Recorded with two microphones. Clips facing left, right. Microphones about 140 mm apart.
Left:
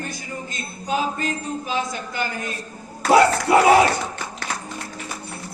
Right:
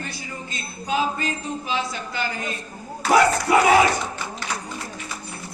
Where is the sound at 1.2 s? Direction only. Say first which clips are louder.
Left 2 dB; 45° left (ahead or behind).